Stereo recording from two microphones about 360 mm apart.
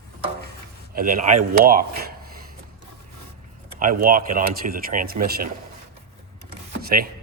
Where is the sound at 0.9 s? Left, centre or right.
Right.